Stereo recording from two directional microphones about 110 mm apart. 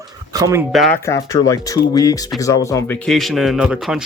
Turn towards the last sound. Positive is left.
turn(degrees=-5)  # may be behind; listen again after turning